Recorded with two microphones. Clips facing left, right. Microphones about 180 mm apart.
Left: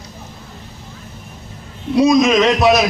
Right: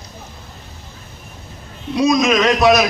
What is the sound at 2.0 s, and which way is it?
Speech, 25° left (ahead or behind).